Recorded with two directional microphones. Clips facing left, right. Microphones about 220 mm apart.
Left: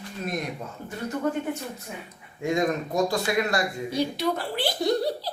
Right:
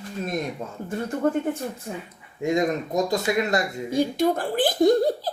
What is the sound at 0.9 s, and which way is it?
Speech, 50° right (ahead or behind).